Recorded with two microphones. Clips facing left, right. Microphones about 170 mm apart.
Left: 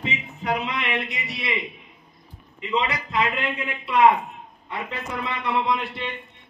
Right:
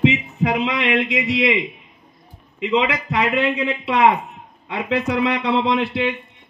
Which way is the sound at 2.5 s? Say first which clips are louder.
Right 6 dB; 85° right.